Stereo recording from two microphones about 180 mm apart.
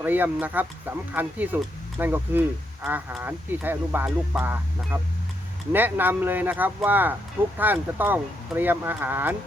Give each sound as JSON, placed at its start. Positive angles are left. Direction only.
{"t": 0.0, "sound": "speech", "side_deg": -10}